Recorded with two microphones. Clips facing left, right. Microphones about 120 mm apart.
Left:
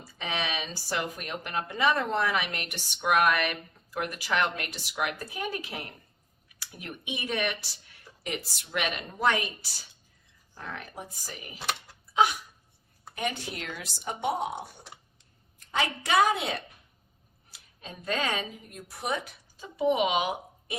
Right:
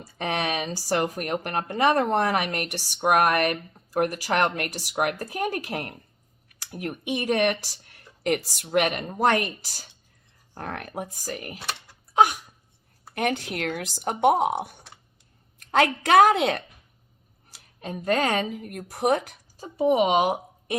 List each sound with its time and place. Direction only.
0.0 s speech: 50° right (ahead or behind)
10.5 s speech: 60° right (ahead or behind)
12.1 s hiccup: 50° right (ahead or behind)
13.1 s speech: 60° right (ahead or behind)
15.7 s a woman's voice: 55° right (ahead or behind)
18.4 s speech: 60° right (ahead or behind); by 20.7 s 40° right (ahead or behind)